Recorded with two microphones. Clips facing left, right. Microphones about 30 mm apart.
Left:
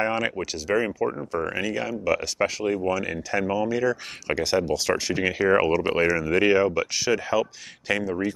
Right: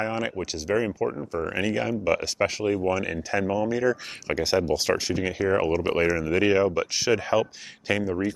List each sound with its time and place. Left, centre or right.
0.0 s a sound: centre
0.4 s speech: centre
1.4 s speech: centre
2.6 s speech: centre
5.1 s speech: centre
5.7 s speech: centre
7.1 s speech: centre
7.9 s speech: centre